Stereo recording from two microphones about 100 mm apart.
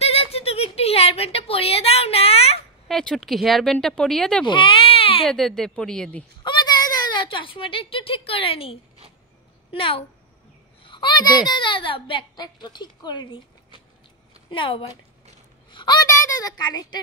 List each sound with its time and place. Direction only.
0.0 s a sound: 85° left
2.9 s speech: 5° left (ahead or behind)
4.5 s baby cry: 60° left (ahead or behind)
5.3 s speech: 5° left (ahead or behind)
6.4 s a sound: 45° left (ahead or behind); by 8.7 s 70° left (ahead or behind)
9.7 s a child's voice: 65° left (ahead or behind)
10.8 s a woman's voice: 55° left (ahead or behind)
14.5 s speech: 55° left (ahead or behind)
15.7 s a sound: 50° left (ahead or behind)
16.1 s a child's voice: 35° left (ahead or behind)